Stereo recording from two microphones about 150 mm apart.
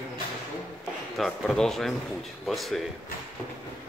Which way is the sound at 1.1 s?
Centre (ahead or behind).